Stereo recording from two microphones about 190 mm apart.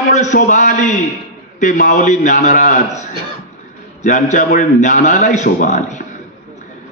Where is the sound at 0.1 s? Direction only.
40° left (ahead or behind).